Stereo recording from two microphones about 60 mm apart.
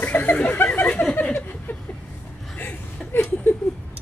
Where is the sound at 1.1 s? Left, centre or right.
Left.